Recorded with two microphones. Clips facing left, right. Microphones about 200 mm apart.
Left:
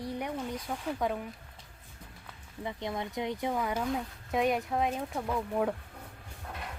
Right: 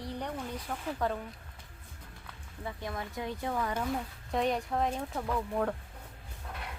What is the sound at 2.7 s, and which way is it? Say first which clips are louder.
Speech: left 3 dB; 20° left (ahead or behind).